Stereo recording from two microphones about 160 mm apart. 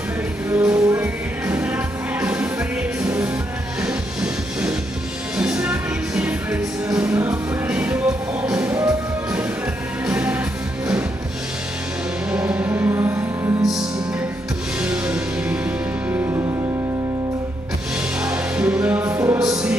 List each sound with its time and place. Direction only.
0.6 s music: 10° right (ahead or behind)
10.0 s music: 10° right (ahead or behind)
12.3 s music: 10° right (ahead or behind)
14.8 s music: 5° right (ahead or behind)
16.1 s music: 20° right (ahead or behind)
18.2 s music: 5° right (ahead or behind)